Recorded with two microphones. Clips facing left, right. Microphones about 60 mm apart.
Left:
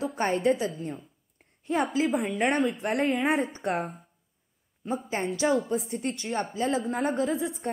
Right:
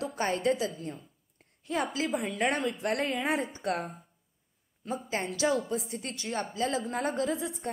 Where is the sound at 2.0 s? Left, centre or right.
Centre.